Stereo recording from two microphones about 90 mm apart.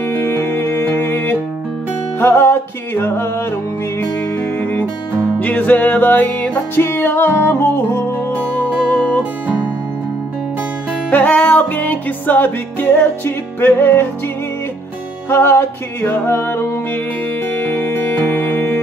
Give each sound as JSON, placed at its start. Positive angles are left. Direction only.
{"t": 0.0, "sound": "music", "side_deg": 20}
{"t": 11.1, "sound": "music", "side_deg": 15}
{"t": 15.2, "sound": "music", "side_deg": 25}